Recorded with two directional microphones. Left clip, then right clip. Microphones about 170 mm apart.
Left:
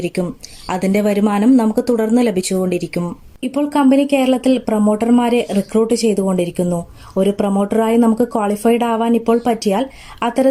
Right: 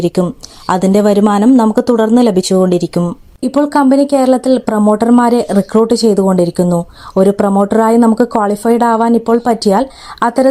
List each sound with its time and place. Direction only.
0.0 s a woman's voice: 30° right (ahead or behind)